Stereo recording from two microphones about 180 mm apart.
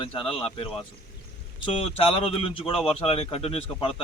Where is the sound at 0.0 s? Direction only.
30° left (ahead or behind).